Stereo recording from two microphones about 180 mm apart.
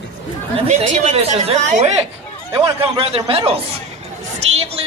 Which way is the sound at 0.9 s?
40° right (ahead or behind).